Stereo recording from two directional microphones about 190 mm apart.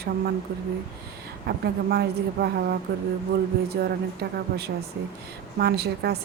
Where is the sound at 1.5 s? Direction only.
55° right (ahead or behind).